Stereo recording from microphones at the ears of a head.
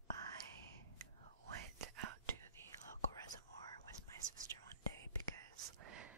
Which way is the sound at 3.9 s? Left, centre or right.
Right.